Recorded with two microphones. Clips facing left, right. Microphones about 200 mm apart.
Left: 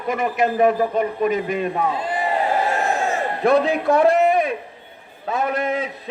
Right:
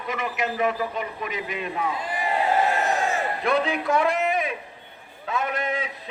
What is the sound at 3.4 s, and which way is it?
A man's voice, 40° left (ahead or behind).